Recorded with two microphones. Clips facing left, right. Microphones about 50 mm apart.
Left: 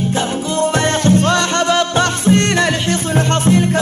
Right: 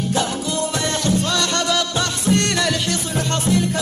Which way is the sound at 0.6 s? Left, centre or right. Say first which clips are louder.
Left 9 dB; left.